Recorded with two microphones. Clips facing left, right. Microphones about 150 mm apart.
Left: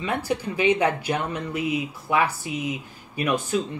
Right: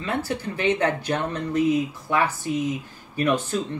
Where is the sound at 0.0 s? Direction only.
15° left (ahead or behind).